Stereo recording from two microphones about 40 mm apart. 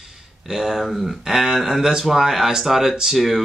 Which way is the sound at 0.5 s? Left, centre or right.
Centre.